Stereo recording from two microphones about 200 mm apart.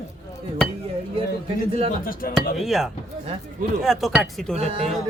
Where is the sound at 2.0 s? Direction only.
45° left (ahead or behind).